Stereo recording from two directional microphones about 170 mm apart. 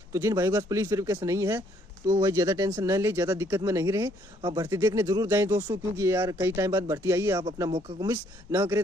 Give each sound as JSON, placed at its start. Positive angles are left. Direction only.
{"t": 0.1, "sound": "speech", "side_deg": -15}
{"t": 4.4, "sound": "speech", "side_deg": -30}
{"t": 4.6, "sound": "speech", "side_deg": -15}